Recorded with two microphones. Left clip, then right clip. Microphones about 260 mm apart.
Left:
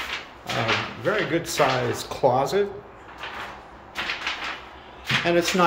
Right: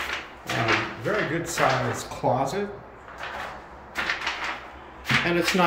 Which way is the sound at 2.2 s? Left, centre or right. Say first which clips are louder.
Left 4 dB; centre.